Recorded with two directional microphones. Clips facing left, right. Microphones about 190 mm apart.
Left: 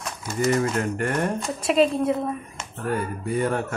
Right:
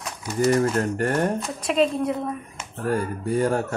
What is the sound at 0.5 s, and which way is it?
Speech, 35° right (ahead or behind).